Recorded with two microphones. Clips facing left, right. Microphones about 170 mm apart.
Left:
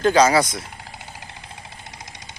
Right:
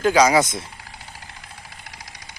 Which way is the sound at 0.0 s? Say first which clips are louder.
Even; 10° right (ahead or behind).